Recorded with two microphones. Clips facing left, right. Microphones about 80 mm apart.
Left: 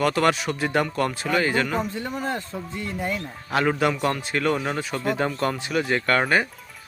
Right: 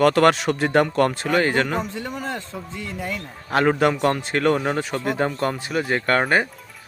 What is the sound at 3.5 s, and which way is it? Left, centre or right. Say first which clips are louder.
Speech: right 3 dB; right.